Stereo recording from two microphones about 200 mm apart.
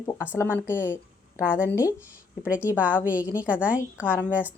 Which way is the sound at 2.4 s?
5° right (ahead or behind).